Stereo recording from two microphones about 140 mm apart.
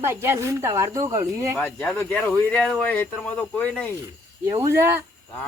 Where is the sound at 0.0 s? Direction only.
15° right (ahead or behind).